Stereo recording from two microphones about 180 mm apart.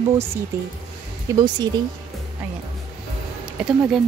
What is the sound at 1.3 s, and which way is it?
Speech, 25° right (ahead or behind).